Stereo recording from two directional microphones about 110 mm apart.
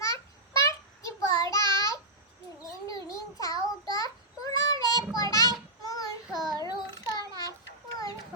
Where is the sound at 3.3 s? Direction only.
35° left (ahead or behind).